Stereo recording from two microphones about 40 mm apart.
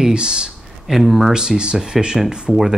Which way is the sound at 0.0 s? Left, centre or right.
Centre.